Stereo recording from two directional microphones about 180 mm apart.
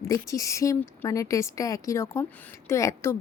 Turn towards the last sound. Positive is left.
turn(degrees=15)  # may be behind; listen again after turning